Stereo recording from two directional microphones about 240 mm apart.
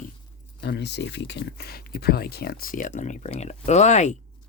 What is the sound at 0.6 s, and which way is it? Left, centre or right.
Speech, left.